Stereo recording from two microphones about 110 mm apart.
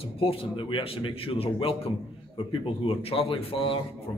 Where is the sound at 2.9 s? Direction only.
60° left (ahead or behind).